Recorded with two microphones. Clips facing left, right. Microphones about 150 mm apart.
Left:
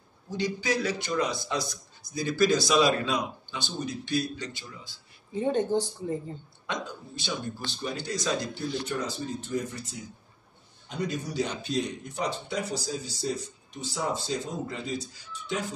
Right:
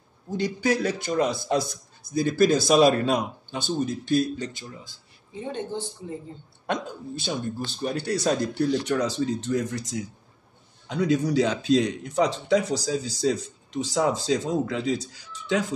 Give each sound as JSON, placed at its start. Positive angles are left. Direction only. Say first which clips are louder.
{"t": 0.3, "sound": "a man's voice", "louder": "right 4 dB", "side_deg": -50}
{"t": 5.5, "sound": "speech", "louder": "left 6 dB", "side_deg": 45}
{"t": 6.7, "sound": "a man's voice", "louder": "right 6 dB", "side_deg": -45}